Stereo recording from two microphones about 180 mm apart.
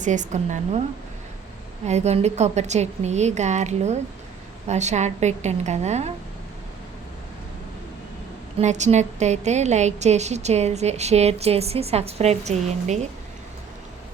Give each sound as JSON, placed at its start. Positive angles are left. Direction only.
{"t": 0.0, "sound": "a woman's voice", "side_deg": -45}
{"t": 1.9, "sound": "a woman's voice", "side_deg": -40}
{"t": 8.5, "sound": "a woman's voice", "side_deg": -40}